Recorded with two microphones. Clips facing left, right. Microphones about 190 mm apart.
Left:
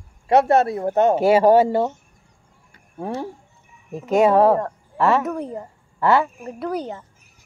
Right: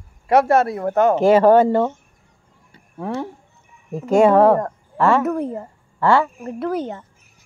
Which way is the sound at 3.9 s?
Centre (ahead or behind).